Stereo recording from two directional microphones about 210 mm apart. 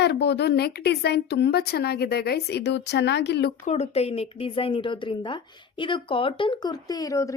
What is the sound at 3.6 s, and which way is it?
A woman's voice, 30° left (ahead or behind).